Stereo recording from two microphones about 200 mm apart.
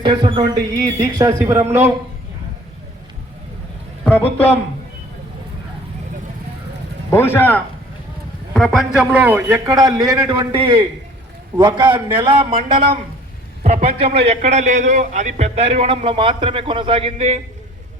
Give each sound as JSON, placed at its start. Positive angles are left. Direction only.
{"t": 0.0, "sound": "speech", "side_deg": -25}
{"t": 7.1, "sound": "a man's voice", "side_deg": 10}